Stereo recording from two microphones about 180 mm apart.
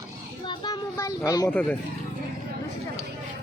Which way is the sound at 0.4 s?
25° left (ahead or behind).